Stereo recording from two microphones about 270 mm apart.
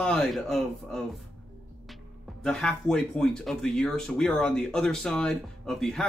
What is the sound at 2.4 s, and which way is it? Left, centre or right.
Speech, centre.